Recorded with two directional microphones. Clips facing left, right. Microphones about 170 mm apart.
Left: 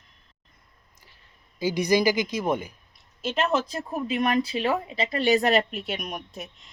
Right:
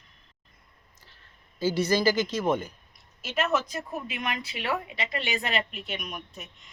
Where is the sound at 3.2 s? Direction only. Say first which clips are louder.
Left 3 dB; 30° left (ahead or behind).